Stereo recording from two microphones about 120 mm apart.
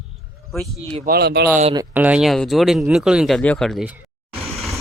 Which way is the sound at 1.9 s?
10° right (ahead or behind).